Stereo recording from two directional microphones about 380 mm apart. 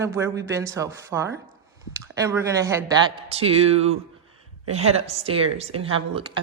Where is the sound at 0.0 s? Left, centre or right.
Centre.